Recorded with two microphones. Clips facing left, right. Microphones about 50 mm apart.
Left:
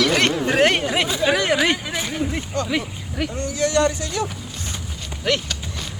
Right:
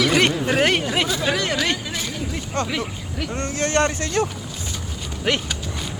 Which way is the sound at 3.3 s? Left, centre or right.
Right.